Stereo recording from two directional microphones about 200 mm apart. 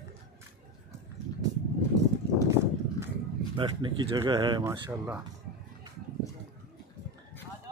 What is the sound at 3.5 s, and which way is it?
Speech, 25° right (ahead or behind).